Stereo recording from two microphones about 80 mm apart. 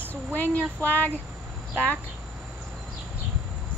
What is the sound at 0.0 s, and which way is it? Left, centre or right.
Speech, left.